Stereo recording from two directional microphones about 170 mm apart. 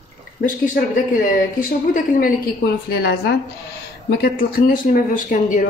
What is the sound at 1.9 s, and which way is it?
A woman's voice, 60° left (ahead or behind).